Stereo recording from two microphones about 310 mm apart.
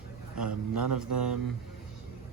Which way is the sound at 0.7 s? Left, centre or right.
Right.